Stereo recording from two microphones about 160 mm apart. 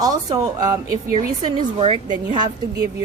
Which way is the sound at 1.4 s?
35° right (ahead or behind).